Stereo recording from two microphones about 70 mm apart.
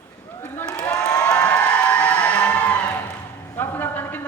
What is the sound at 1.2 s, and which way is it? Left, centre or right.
Music, centre.